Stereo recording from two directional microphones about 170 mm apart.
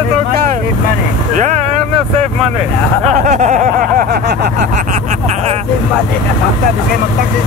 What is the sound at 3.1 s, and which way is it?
Speech, 45° right (ahead or behind).